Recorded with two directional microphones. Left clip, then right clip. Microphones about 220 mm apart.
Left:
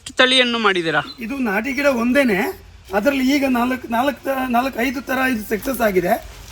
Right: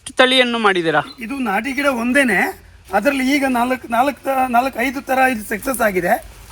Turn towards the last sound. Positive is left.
turn(degrees=-20)  # may be behind; listen again after turning